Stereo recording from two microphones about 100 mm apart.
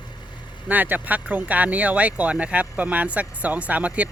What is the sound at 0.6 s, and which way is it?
Speech, 15° right (ahead or behind).